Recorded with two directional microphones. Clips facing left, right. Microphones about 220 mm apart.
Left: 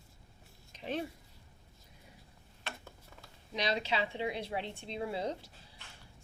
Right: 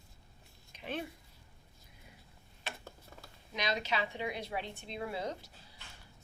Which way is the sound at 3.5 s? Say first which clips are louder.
Left 2 dB; 30° left (ahead or behind).